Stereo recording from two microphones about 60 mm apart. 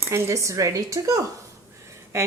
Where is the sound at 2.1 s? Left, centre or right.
Right.